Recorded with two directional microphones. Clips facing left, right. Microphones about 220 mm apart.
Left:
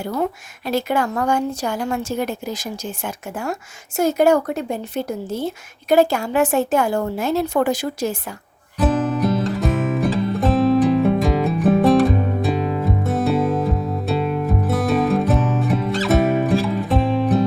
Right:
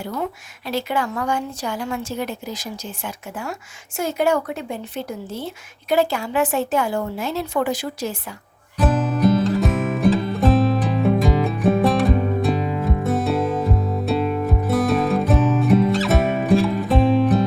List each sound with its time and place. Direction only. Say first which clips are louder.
0.7 s a woman's voice: left 3 dB; 45° left (ahead or behind)
8.8 s music: even; centre (ahead or behind)